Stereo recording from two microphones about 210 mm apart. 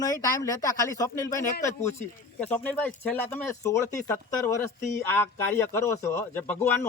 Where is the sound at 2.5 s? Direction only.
5° left (ahead or behind).